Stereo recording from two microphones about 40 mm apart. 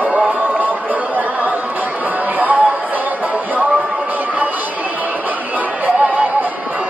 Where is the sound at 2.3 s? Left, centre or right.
Right.